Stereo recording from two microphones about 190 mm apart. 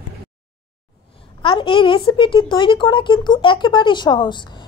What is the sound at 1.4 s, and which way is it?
Speech, 25° left (ahead or behind).